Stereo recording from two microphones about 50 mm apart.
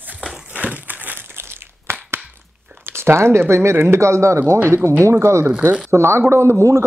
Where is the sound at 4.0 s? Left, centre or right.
Right.